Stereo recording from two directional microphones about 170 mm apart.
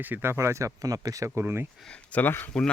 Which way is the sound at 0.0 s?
10° right (ahead or behind).